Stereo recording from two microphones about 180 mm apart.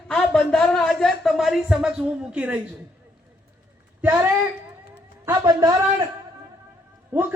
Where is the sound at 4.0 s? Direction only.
10° right (ahead or behind).